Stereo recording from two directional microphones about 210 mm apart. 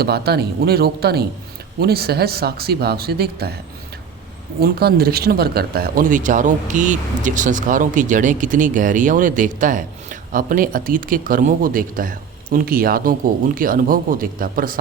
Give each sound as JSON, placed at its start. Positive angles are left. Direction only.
{"t": 0.0, "sound": "speech", "side_deg": -50}
{"t": 4.6, "sound": "speech", "side_deg": -50}